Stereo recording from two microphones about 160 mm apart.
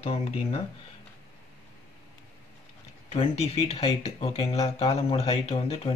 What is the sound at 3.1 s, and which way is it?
Speech, 40° left (ahead or behind).